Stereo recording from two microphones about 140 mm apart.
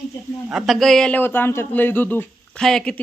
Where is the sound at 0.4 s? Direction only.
5° right (ahead or behind).